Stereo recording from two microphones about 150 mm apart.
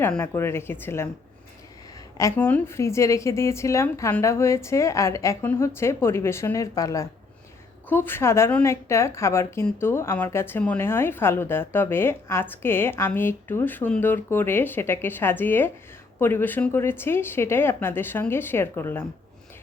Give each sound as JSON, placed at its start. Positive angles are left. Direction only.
{"t": 0.1, "sound": "a woman's voice", "side_deg": 15}
{"t": 2.1, "sound": "a woman's voice", "side_deg": 15}